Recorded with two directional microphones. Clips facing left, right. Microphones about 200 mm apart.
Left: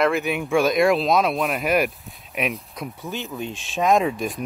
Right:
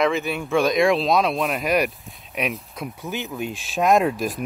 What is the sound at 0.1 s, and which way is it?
Speech, 15° left (ahead or behind).